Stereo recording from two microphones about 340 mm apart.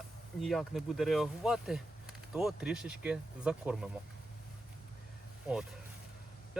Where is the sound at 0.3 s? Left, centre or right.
Centre.